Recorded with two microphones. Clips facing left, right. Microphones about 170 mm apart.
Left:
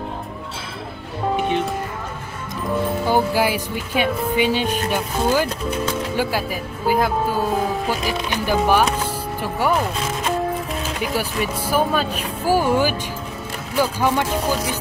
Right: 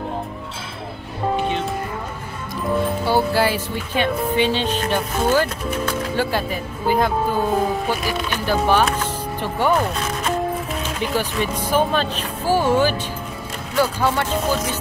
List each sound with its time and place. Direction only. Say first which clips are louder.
3.1 s speech: even; 15° left (ahead or behind)
8.1 s speech: even; 15° left (ahead or behind)